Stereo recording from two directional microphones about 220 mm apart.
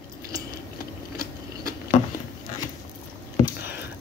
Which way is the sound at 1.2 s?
40° left (ahead or behind).